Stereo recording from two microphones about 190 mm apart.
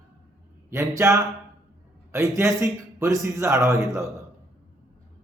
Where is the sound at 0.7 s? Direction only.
15° right (ahead or behind).